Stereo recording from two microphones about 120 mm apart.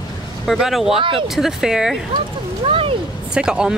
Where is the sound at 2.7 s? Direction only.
50° right (ahead or behind).